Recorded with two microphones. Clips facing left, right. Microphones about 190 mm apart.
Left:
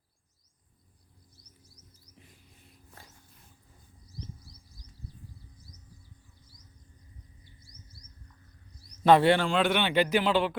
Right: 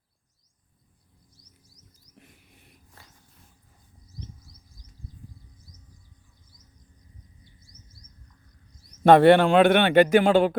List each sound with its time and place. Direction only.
2.1 s rodents: 70° right (ahead or behind)
9.0 s a man's voice: 55° right (ahead or behind)